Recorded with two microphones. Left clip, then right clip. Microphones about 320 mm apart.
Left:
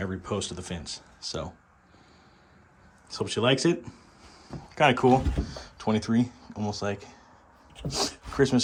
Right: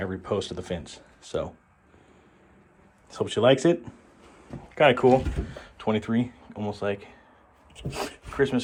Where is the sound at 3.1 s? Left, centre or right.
Centre.